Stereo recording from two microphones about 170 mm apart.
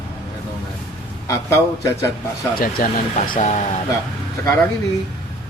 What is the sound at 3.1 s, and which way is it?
Speech, 45° left (ahead or behind).